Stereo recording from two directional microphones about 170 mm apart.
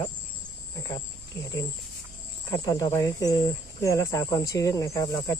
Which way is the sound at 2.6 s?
20° left (ahead or behind).